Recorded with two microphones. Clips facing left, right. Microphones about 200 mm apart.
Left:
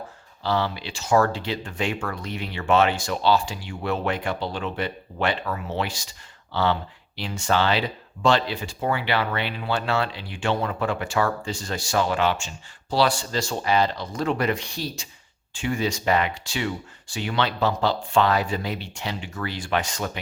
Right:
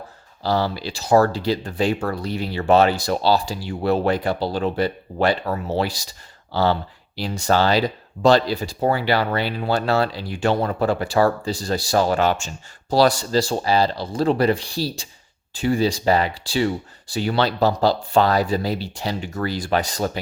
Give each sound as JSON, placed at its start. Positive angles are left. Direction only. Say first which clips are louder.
{"t": 0.4, "sound": "speech", "louder": "right 3 dB", "side_deg": -40}